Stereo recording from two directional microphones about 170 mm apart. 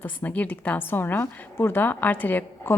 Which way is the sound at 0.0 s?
10° left (ahead or behind).